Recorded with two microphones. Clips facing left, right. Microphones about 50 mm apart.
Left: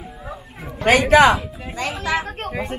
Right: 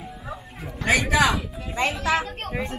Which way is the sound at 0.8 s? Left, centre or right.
Left.